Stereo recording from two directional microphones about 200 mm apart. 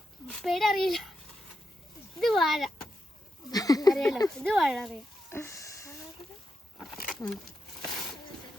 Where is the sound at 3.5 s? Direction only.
20° left (ahead or behind).